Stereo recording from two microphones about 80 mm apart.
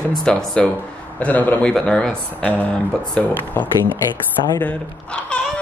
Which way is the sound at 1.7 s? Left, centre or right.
Centre.